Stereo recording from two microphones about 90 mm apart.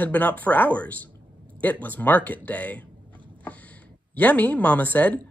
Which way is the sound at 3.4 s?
15° left (ahead or behind).